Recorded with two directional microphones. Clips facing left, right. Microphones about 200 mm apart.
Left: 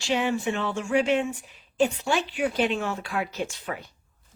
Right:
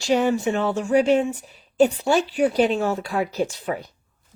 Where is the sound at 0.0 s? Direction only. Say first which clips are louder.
Right 6 dB; 40° right (ahead or behind).